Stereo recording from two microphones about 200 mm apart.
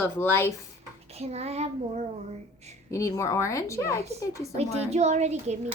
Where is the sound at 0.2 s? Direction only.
10° left (ahead or behind).